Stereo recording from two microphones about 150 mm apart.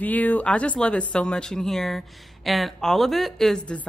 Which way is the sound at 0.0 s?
10° left (ahead or behind).